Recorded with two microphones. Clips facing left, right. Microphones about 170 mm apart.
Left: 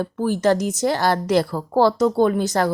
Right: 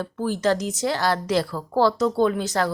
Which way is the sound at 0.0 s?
50° left (ahead or behind).